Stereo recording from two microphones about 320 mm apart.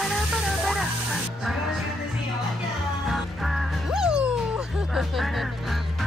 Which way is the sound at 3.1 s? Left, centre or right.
Centre.